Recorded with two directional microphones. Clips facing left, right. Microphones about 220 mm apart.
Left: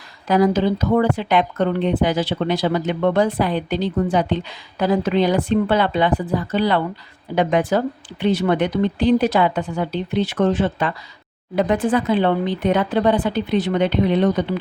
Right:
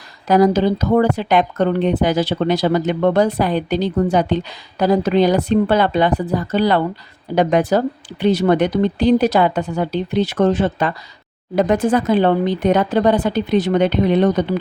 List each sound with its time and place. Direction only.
0.3 s speech: 40° right (ahead or behind)